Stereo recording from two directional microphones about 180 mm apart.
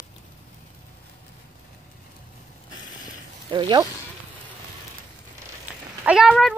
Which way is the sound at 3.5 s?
25° right (ahead or behind).